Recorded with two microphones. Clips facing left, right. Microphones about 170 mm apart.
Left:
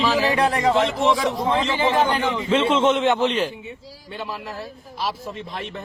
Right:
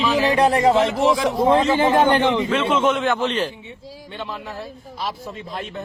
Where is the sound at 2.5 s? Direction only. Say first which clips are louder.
Left 1 dB; 25° left (ahead or behind); by 3.5 s 10° left (ahead or behind).